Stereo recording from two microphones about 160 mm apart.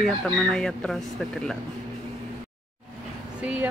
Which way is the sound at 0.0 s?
5° left (ahead or behind).